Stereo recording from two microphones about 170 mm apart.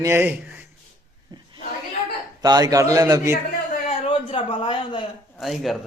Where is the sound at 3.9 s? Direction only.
30° left (ahead or behind).